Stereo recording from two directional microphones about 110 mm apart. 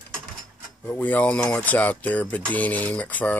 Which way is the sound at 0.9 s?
15° left (ahead or behind).